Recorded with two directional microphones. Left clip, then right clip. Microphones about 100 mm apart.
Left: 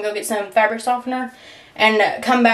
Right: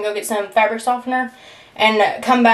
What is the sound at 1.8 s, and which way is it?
Speech, 15° left (ahead or behind).